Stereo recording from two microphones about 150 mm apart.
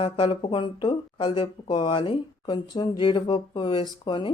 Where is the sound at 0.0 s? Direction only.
30° left (ahead or behind).